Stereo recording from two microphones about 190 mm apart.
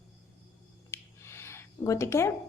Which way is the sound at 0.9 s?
15° left (ahead or behind).